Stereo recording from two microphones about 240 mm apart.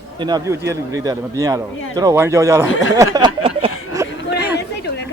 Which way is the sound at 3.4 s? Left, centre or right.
Right.